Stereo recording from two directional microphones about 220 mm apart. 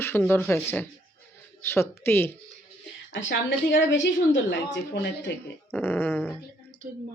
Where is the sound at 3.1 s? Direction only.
55° left (ahead or behind).